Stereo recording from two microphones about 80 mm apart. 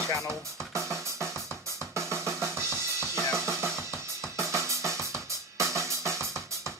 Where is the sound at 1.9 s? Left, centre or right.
Right.